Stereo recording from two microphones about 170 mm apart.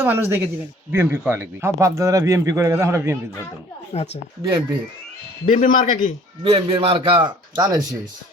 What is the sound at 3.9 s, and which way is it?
Speech, 40° left (ahead or behind).